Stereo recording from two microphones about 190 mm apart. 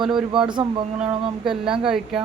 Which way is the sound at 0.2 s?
25° right (ahead or behind).